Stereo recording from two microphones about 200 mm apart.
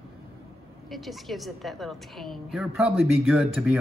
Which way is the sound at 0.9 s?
Centre (ahead or behind).